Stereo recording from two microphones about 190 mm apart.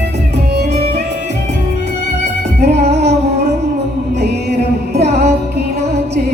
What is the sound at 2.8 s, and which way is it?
Music, 60° right (ahead or behind).